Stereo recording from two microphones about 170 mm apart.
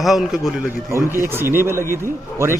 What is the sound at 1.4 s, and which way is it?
Speech, 15° right (ahead or behind).